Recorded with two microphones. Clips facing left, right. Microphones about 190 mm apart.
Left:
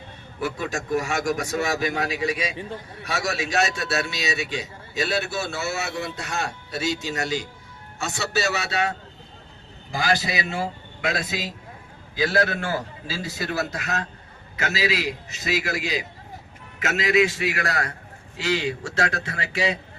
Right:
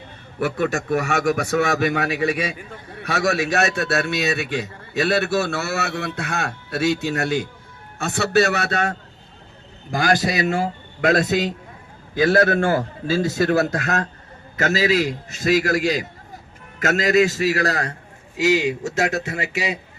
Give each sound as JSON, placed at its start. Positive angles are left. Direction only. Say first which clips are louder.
{"t": 0.3, "sound": "a man's voice", "louder": "right 6 dB", "side_deg": -65}
{"t": 18.3, "sound": "a man's voice", "louder": "right 6 dB", "side_deg": -15}